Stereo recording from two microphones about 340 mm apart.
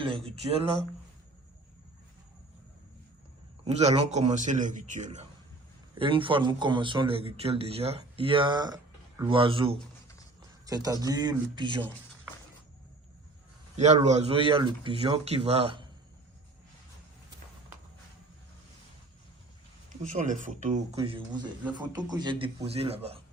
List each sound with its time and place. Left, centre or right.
0.0 s a man's voice: centre
3.6 s a man's voice: centre
13.7 s a man's voice: centre
20.1 s a man's voice: right